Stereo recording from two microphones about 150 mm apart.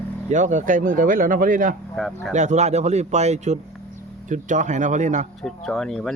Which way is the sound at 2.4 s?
50° right (ahead or behind).